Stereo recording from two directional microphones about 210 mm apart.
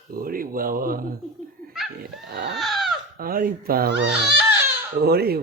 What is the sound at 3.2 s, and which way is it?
Speech, 45° right (ahead or behind).